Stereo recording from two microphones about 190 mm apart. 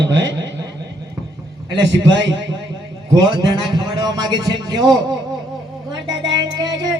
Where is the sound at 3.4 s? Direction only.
20° right (ahead or behind).